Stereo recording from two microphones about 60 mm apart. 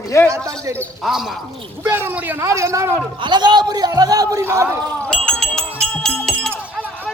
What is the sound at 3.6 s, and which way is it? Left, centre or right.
Speech, right.